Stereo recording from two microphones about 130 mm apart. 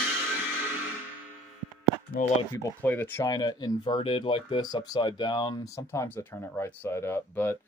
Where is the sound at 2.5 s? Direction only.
15° left (ahead or behind).